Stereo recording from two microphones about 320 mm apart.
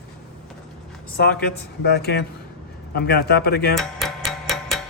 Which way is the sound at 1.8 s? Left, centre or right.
Left.